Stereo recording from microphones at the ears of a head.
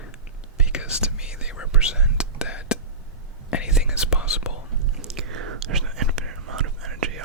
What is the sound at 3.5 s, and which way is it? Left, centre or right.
Whispering, left.